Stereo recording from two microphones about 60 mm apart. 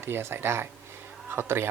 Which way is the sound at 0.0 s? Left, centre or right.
Right.